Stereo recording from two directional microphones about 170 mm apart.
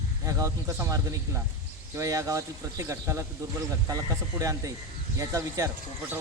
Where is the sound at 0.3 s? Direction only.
20° right (ahead or behind).